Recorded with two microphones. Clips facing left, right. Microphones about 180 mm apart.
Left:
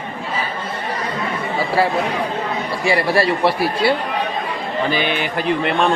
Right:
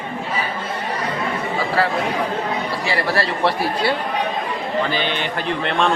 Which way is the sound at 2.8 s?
15° left (ahead or behind).